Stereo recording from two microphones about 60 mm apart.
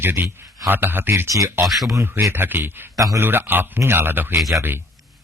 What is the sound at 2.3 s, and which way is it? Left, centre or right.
Speech, right.